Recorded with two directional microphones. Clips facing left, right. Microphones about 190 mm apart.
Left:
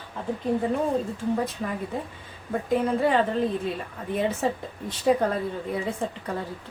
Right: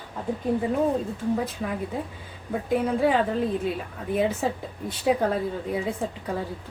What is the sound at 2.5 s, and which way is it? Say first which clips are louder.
Speech: even; 5° right (ahead or behind).